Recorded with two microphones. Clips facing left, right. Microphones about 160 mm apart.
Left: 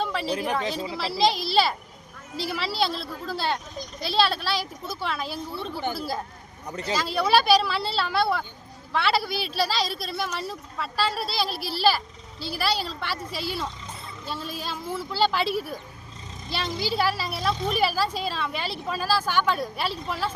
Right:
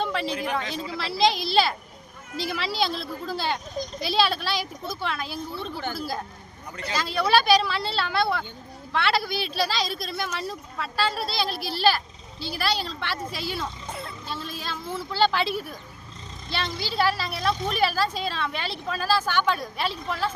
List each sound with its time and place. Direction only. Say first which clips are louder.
0.0 s a sound: right 1 dB; 5° left (ahead or behind)
0.6 s speech: left 3 dB; 35° left (ahead or behind)
0.9 s a woman's voice: right 1 dB; 5° left (ahead or behind)